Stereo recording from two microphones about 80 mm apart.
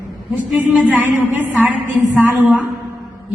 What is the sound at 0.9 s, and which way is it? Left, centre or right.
A woman's voice, right.